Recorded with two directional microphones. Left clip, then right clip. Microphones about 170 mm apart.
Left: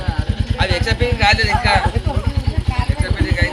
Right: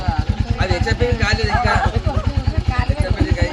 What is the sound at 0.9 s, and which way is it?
Speech, 90° right.